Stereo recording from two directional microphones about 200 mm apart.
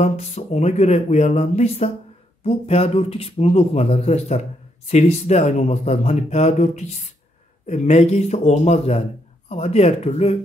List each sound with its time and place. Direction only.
0.0 s speech: 35° left (ahead or behind)